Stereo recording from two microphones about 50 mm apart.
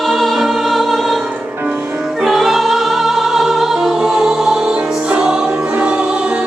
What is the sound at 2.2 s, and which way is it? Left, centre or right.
Music, centre.